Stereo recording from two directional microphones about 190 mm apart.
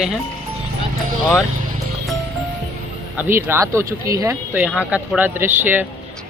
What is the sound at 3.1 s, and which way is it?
Speech, 10° right (ahead or behind).